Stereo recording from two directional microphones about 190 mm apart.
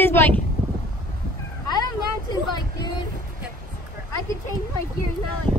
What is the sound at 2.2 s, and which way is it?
Vehicle, 20° left (ahead or behind).